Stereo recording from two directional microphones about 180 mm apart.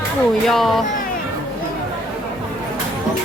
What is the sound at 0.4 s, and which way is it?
Speech, centre (ahead or behind).